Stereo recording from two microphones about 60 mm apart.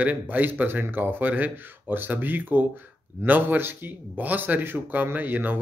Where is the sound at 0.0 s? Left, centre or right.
Right.